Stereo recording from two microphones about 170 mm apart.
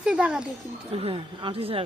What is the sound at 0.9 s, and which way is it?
Speech, 30° right (ahead or behind).